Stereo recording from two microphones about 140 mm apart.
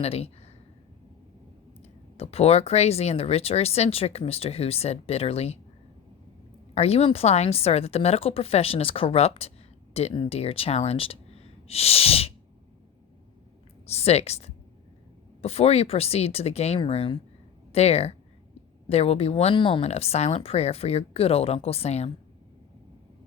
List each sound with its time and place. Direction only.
0.0 s speech: 45° left (ahead or behind)
1.8 s speech: 45° left (ahead or behind)
6.7 s speech: 45° left (ahead or behind)
13.8 s speech: 50° left (ahead or behind)